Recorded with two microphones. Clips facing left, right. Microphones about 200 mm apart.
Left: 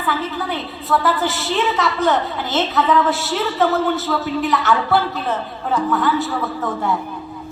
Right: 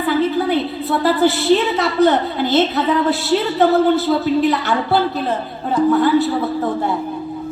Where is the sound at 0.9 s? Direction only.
35° right (ahead or behind).